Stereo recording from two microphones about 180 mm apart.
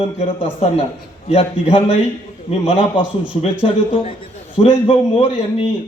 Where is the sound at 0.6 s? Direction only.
35° left (ahead or behind).